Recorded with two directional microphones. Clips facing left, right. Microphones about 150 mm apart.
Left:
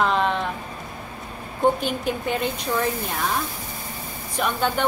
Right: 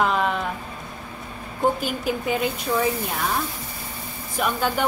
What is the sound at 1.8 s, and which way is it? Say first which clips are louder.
A woman's voice: even; 5° right (ahead or behind).